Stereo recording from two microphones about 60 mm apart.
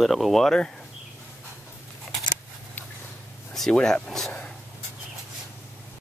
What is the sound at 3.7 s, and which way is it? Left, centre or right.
Speech, centre.